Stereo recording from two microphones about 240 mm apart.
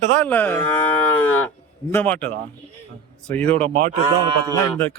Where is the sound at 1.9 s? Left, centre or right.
Centre.